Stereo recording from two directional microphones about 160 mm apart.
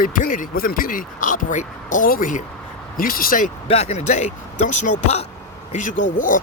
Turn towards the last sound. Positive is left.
turn(degrees=55)  # may be behind; listen again after turning